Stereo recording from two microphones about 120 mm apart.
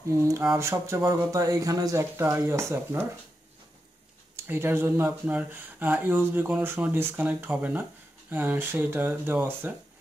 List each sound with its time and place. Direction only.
0.1 s speech: 25° right (ahead or behind)
4.5 s speech: 20° right (ahead or behind)